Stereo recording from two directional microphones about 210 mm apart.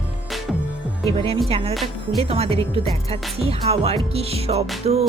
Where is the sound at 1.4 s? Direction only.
30° right (ahead or behind).